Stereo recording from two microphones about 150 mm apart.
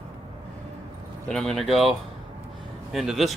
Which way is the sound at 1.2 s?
5° left (ahead or behind).